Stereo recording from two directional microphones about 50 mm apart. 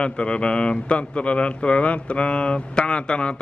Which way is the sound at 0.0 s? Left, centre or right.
Left.